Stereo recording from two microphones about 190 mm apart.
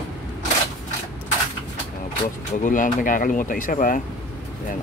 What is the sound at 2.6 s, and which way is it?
Speech, 45° left (ahead or behind).